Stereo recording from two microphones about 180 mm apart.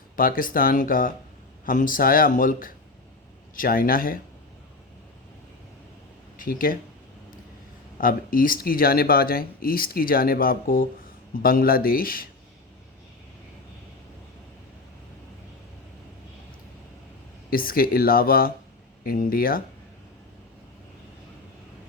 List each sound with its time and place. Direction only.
0.2 s speech: 50° left (ahead or behind)
6.3 s speech: 50° left (ahead or behind)
8.0 s speech: 50° left (ahead or behind)
17.5 s speech: 50° left (ahead or behind)